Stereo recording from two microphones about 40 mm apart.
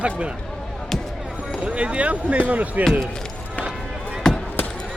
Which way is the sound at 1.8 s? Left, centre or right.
Right.